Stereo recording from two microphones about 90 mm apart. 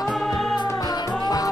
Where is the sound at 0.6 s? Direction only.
50° left (ahead or behind).